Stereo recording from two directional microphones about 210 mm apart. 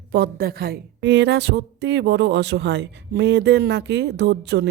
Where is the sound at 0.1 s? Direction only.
50° right (ahead or behind).